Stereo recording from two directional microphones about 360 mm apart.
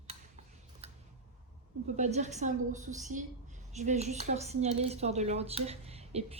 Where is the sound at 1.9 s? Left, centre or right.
Centre.